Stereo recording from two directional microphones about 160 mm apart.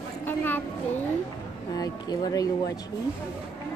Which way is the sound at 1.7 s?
25° left (ahead or behind).